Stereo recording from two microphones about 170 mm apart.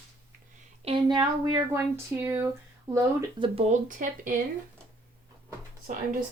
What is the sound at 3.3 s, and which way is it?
Speech, 35° right (ahead or behind).